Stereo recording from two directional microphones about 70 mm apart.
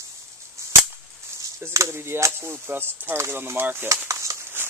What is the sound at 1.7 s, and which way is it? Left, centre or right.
Speech, right.